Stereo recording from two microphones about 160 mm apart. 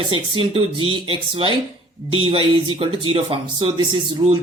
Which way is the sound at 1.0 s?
35° right (ahead or behind).